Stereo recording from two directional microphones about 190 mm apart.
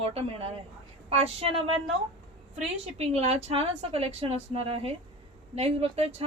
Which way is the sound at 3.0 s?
35° right (ahead or behind).